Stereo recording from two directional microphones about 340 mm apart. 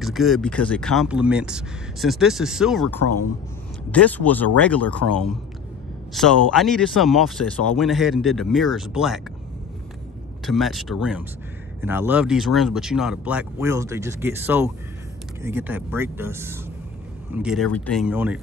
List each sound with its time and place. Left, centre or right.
0.0 s speech: centre
10.4 s speech: centre